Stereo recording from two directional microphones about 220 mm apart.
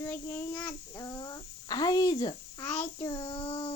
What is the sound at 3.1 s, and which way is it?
Speech, 25° left (ahead or behind).